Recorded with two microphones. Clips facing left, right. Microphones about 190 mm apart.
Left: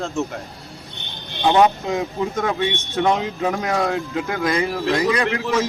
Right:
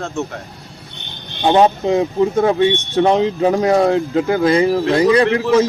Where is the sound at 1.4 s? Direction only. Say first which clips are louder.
Right 3 dB; 30° right (ahead or behind).